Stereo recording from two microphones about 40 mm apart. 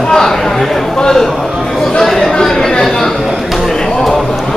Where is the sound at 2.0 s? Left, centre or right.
Centre.